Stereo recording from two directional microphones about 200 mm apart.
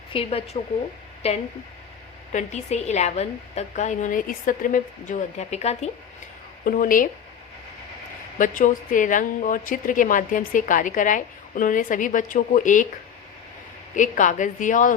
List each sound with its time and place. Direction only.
0.1 s a woman's voice: 30° left (ahead or behind)
6.7 s speech: 45° left (ahead or behind)
8.4 s a woman's voice: 40° left (ahead or behind)
13.9 s a woman's voice: 40° left (ahead or behind)